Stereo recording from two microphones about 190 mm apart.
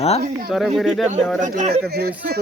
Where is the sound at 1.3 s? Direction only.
40° right (ahead or behind).